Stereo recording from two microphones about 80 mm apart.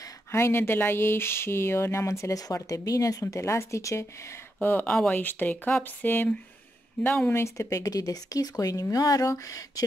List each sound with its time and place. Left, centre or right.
0.3 s speech: left
4.6 s speech: left
4.8 s speech: centre
5.1 s speech: left
7.3 s speech: left